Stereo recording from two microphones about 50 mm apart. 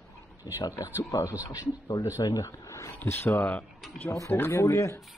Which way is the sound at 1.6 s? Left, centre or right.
Left.